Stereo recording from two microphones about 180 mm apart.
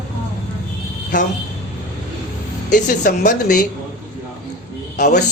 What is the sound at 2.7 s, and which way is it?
Speech, 45° left (ahead or behind).